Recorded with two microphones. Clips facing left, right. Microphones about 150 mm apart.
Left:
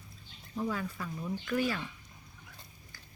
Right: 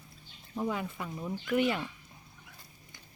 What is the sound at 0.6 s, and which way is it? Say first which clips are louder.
Speech: right 1 dB; 20° right (ahead or behind).